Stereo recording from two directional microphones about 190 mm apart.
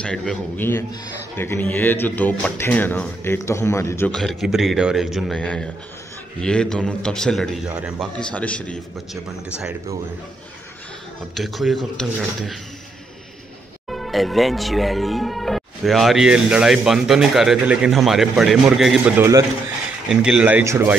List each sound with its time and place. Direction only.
0.0 s speech: 5° left (ahead or behind)
4.1 s speech: centre (ahead or behind)
8.2 s speech: 5° left (ahead or behind)
11.3 s speech: centre (ahead or behind)
13.8 s speech: centre (ahead or behind)